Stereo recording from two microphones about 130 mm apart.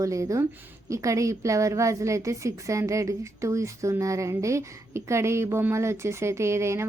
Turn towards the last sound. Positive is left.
turn(degrees=-20)  # may be behind; listen again after turning